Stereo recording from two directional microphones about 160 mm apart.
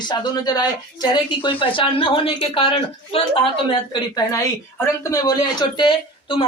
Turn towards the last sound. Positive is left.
turn(degrees=30)  # may be behind; listen again after turning